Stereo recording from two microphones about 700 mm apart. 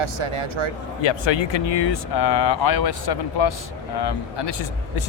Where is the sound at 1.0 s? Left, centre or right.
Left.